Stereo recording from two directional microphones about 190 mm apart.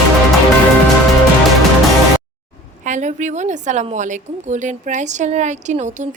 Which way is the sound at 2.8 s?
40° right (ahead or behind).